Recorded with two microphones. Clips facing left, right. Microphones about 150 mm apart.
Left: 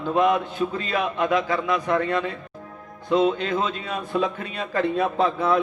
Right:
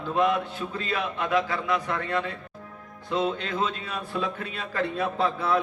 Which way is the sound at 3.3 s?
20° left (ahead or behind).